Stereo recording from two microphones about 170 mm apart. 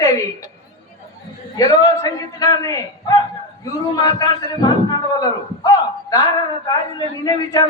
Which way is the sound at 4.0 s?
25° left (ahead or behind).